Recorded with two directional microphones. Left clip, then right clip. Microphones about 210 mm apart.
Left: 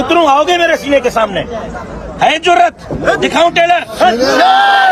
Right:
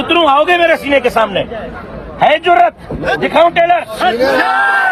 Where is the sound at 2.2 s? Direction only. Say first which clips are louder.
Even; 25° right (ahead or behind).